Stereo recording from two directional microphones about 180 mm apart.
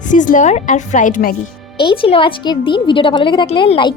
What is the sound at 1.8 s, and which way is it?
A woman's voice, 30° left (ahead or behind).